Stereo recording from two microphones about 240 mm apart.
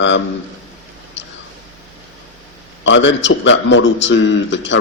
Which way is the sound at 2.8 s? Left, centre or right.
Left.